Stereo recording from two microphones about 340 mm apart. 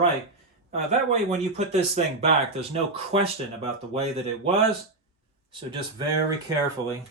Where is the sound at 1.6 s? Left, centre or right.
Centre.